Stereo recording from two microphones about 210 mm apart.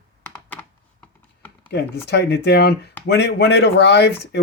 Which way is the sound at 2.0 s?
55° left (ahead or behind).